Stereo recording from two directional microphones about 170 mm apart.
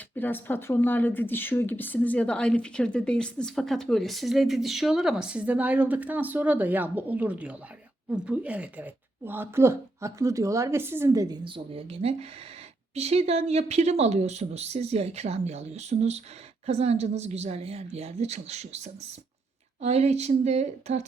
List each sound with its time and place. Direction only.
0.2 s speech: 10° left (ahead or behind); by 18.8 s 40° right (ahead or behind)
19.8 s speech: 40° right (ahead or behind)